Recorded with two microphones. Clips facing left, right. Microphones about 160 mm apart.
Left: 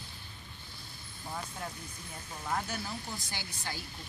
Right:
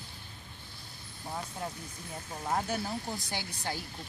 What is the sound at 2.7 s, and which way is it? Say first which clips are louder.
Speech: right 5 dB; 50° right (ahead or behind).